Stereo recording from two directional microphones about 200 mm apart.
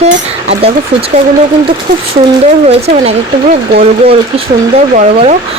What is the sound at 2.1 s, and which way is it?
Speech, 30° right (ahead or behind).